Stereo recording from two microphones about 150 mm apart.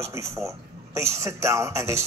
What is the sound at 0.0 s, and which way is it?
A man's voice, 20° right (ahead or behind).